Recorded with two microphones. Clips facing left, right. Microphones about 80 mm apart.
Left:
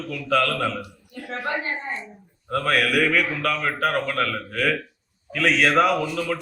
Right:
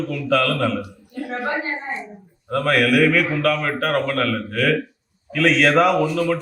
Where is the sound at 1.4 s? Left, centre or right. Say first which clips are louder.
Right 1 dB; right.